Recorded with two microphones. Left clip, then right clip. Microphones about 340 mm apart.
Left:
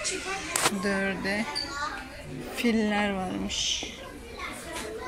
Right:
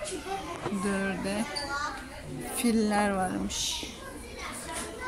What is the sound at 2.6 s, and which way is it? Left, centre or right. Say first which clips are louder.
A woman's voice: left 1 dB; centre.